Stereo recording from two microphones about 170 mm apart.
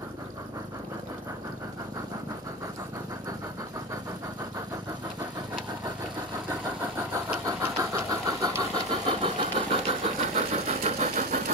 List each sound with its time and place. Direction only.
7.0 s vehicle: 15° right (ahead or behind)
9.0 s engine: 30° right (ahead or behind)
10.3 s engine: 45° right (ahead or behind)